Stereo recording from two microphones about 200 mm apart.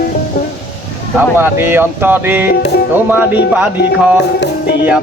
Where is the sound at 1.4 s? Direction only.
10° right (ahead or behind).